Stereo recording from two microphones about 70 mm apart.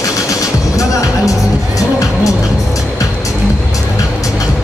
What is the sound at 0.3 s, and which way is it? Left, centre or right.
Music, left.